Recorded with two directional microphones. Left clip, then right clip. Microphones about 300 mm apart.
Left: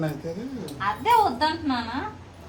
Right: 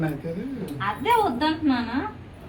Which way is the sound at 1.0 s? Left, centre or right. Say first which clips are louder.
Left 2 dB; centre.